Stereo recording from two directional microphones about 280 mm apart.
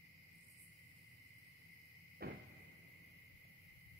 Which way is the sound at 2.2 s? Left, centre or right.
Right.